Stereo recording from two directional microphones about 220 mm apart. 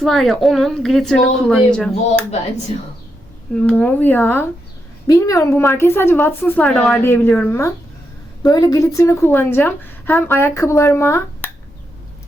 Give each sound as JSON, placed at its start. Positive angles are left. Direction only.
{"t": 0.0, "sound": "speech", "side_deg": 0}
{"t": 2.7, "sound": "speech", "side_deg": 30}
{"t": 3.5, "sound": "a woman's voice", "side_deg": 5}